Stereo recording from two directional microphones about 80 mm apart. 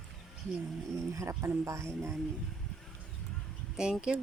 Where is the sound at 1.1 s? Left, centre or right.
Right.